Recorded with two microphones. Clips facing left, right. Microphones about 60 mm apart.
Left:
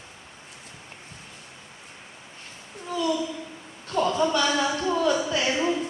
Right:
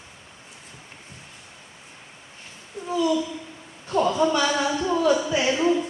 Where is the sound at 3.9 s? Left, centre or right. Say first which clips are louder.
Right 2 dB; centre.